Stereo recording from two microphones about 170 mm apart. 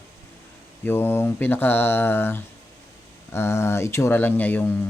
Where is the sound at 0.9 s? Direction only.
10° left (ahead or behind).